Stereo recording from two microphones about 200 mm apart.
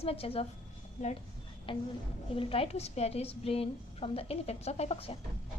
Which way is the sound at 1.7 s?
25° left (ahead or behind).